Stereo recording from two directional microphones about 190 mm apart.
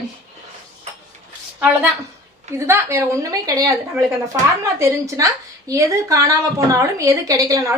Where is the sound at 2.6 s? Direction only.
15° right (ahead or behind).